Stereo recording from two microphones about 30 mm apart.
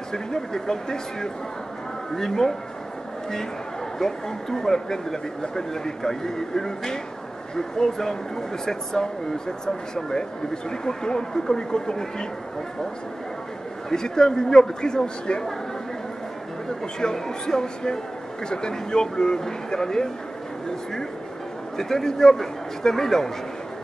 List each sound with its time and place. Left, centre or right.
0.1 s speech: centre
4.0 s speech: centre
13.8 s speech: left
16.8 s speech: left
21.7 s speech: centre